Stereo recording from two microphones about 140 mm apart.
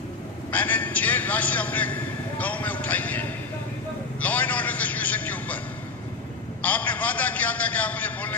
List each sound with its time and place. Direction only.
0.5 s a man's voice: 10° left (ahead or behind)
6.6 s a man's voice: 10° left (ahead or behind)